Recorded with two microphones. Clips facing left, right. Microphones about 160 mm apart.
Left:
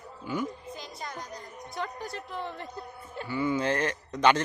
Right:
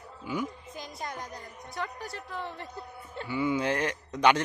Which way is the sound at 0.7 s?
50° right (ahead or behind).